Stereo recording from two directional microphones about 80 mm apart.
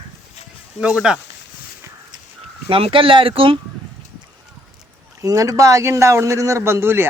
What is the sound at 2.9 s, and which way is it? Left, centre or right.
Speech, right.